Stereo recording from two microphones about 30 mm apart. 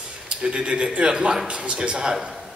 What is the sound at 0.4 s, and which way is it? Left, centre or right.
A man's voice, right.